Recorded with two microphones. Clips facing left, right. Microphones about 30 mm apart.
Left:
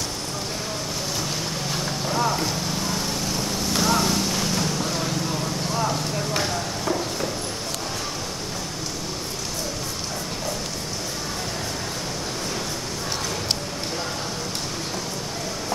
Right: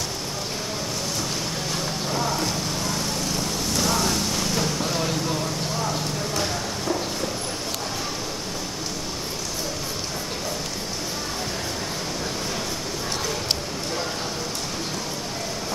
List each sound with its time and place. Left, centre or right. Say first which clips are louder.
2.0 s vehicle: left 3 dB; centre
6.4 s clip-clop: left 1 dB; centre